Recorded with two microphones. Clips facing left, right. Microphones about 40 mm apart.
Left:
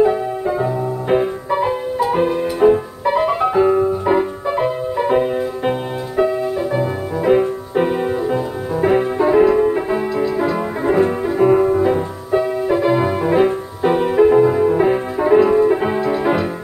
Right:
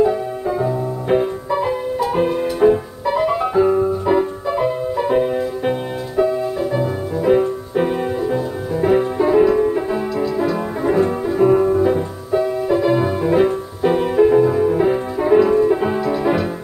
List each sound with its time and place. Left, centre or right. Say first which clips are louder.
0.0 s music: left 2 dB; left
0.7 s music: left 1 dB; centre
3.3 s music: even; left